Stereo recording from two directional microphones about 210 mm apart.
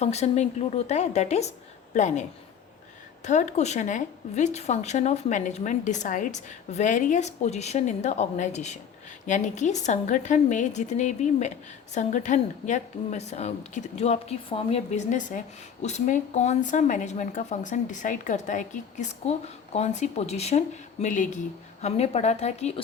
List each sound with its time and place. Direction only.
0.0 s a woman's voice: 30° left (ahead or behind)
3.2 s a woman's voice: 35° left (ahead or behind)